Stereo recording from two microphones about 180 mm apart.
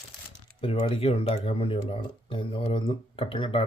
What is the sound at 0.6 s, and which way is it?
Speech, 30° left (ahead or behind).